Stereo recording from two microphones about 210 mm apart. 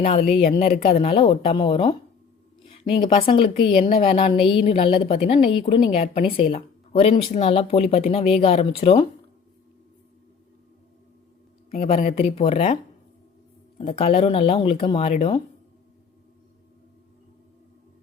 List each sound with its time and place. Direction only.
0.3 s a woman's voice: 25° left (ahead or behind)
11.7 s a woman's voice: 30° left (ahead or behind)